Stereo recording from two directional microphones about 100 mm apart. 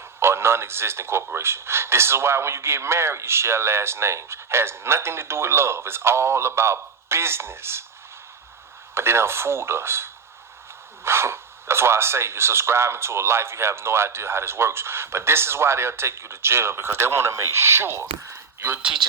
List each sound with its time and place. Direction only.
0.2 s speech: 25° right (ahead or behind)
9.0 s speech: 25° right (ahead or behind)